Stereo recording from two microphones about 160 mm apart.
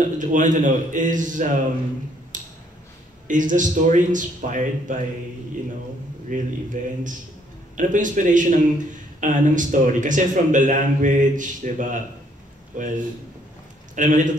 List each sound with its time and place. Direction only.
0.0 s a man's voice: 50° right (ahead or behind)
2.3 s tick-tock: 55° right (ahead or behind)
3.3 s a man's voice: 55° right (ahead or behind)
6.2 s a man's voice: 55° right (ahead or behind)